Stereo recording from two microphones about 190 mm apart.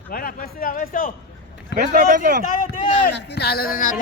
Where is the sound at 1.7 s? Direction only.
60° left (ahead or behind).